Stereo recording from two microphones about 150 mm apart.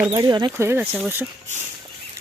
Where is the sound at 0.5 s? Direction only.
15° right (ahead or behind).